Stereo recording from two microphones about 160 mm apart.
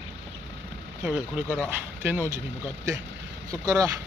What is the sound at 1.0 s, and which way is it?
Speech, 10° right (ahead or behind).